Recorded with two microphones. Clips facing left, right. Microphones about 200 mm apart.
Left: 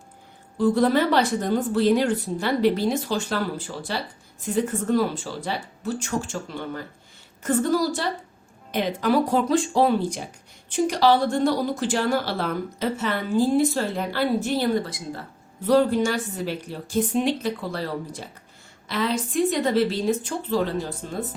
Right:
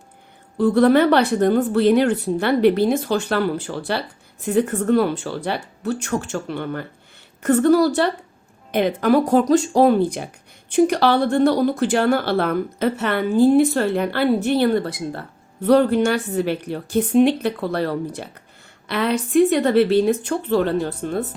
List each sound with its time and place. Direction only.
0.6 s speech: 60° right (ahead or behind)